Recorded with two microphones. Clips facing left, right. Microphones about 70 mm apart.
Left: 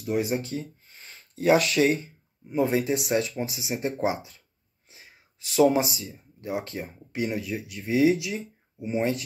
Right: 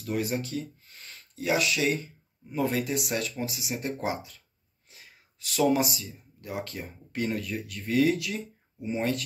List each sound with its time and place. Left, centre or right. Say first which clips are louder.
0.0 s speech: left 3 dB; centre
1.3 s speech: left 6 dB; left
2.4 s speech: left 4 dB; left
4.8 s a sound: left 1 dB; left
5.9 s speech: left 3 dB; left